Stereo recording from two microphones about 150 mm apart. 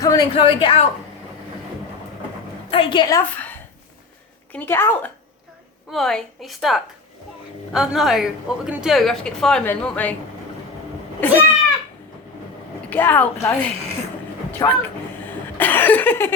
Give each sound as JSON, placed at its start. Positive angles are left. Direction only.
{"t": 0.0, "sound": "a sound", "side_deg": 25}
{"t": 0.3, "sound": "a woman's voice", "side_deg": 35}
{"t": 2.6, "sound": "a woman's voice", "side_deg": 35}
{"t": 3.2, "sound": "a woman's voice", "side_deg": 10}
{"t": 5.9, "sound": "a woman's voice", "side_deg": 0}
{"t": 11.2, "sound": "a woman's voice", "side_deg": 10}
{"t": 12.9, "sound": "a woman's voice", "side_deg": 10}
{"t": 14.6, "sound": "speech", "side_deg": 25}
{"t": 15.5, "sound": "a woman's voice", "side_deg": 10}